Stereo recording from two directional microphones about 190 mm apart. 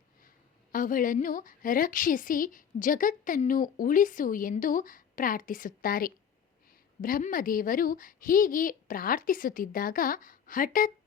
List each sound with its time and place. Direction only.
0.7 s a woman's voice: 45° left (ahead or behind)